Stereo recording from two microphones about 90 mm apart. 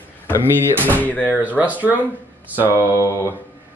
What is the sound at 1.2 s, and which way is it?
Speech, 20° right (ahead or behind).